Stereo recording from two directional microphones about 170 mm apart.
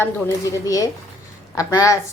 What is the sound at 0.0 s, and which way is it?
Speech, 20° left (ahead or behind).